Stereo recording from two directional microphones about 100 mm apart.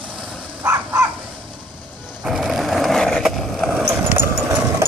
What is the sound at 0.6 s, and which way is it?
Dog, 35° right (ahead or behind).